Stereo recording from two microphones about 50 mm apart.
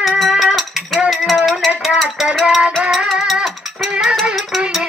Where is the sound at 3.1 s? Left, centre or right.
Centre.